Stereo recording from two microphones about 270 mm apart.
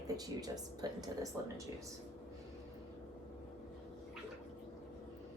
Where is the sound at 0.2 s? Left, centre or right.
Centre.